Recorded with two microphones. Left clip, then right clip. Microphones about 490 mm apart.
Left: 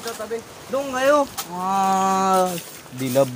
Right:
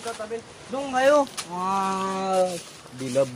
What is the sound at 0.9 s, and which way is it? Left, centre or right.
Speech, right.